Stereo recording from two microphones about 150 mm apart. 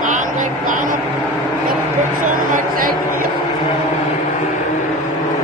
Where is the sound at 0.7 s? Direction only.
60° right (ahead or behind).